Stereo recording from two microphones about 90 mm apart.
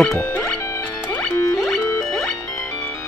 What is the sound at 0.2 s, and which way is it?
Music, 20° left (ahead or behind).